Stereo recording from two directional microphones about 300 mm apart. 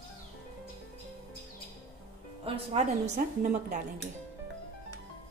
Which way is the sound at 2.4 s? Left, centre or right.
Right.